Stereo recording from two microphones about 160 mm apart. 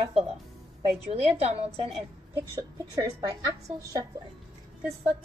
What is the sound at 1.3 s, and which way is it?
Speech, 40° right (ahead or behind).